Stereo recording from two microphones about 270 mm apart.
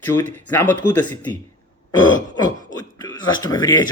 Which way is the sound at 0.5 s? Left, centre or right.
Centre.